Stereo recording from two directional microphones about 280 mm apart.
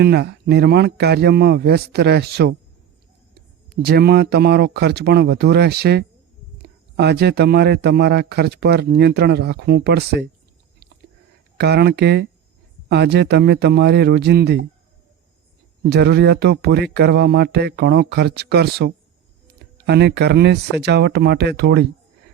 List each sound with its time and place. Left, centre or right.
0.0 s a man's voice: right
3.7 s a man's voice: right
11.5 s a man's voice: right
15.9 s a man's voice: right